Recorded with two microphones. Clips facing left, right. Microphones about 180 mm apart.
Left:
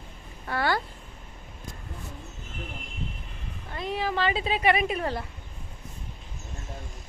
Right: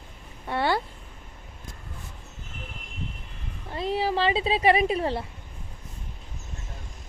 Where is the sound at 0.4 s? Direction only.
25° right (ahead or behind).